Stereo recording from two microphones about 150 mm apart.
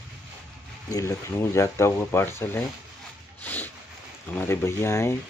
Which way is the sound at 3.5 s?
10° left (ahead or behind).